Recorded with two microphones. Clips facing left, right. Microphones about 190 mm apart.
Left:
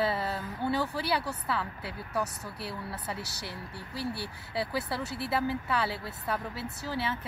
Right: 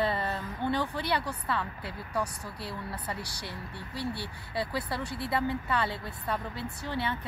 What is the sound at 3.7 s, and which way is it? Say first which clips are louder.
Speech: even; 25° right (ahead or behind).